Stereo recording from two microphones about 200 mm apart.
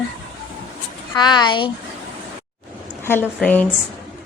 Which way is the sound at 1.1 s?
20° left (ahead or behind).